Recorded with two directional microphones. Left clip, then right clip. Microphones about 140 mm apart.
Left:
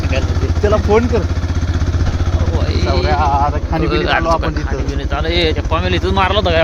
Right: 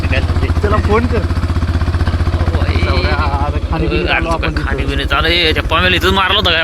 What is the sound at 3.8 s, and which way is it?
Speech, 50° left (ahead or behind).